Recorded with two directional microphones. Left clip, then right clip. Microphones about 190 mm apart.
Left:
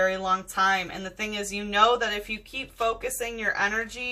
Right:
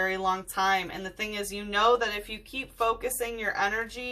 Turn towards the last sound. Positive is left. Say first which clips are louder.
# left 2 dB
turn(degrees=-5)  # may be behind; listen again after turning